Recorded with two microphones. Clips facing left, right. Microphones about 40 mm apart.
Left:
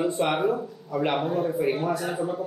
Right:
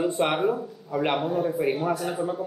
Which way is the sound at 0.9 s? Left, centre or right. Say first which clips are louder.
Even; centre.